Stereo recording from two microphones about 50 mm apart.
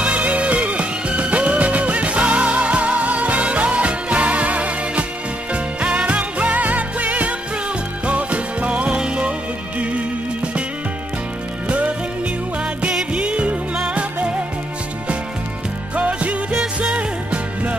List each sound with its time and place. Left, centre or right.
0.0 s music: right
11.6 s music: right
13.1 s music: right
16.0 s music: right